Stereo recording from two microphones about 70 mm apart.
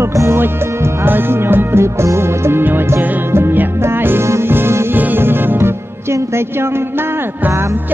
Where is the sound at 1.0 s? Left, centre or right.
Right.